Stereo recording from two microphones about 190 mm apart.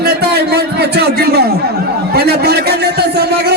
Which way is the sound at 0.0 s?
55° right (ahead or behind).